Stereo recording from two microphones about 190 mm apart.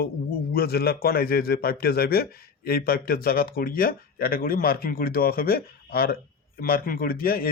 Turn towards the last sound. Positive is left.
turn(degrees=50)  # may be behind; listen again after turning